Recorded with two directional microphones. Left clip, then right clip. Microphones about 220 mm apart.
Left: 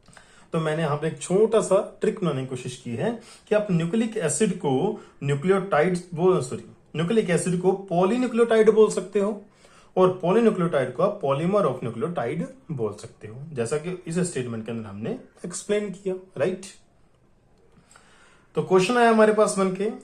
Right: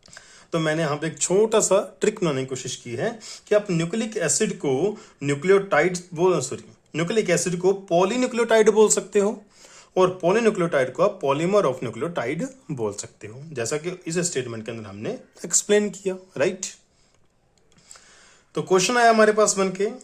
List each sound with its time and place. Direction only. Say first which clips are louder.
0.1 s speech: right 2 dB; 45° right (ahead or behind)
18.5 s speech: even; 40° right (ahead or behind)